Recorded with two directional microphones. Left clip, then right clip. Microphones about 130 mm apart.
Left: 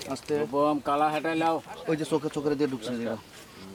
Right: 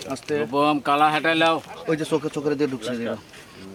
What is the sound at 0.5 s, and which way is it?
Speech, 45° right (ahead or behind).